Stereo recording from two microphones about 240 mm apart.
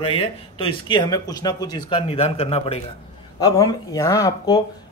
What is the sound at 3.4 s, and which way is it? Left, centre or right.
Speech, centre.